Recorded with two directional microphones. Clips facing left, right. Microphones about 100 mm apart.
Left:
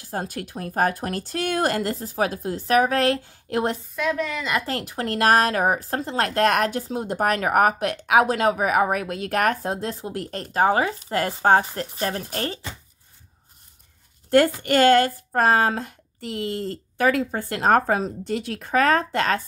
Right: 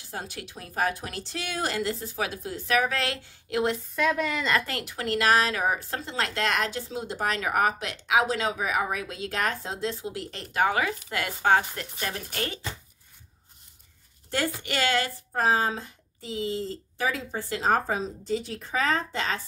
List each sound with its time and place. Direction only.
0.1 s a woman's voice: 45° left (ahead or behind)
3.9 s a woman's voice: centre (ahead or behind)
4.6 s speech: 35° left (ahead or behind)
14.3 s speech: 50° left (ahead or behind)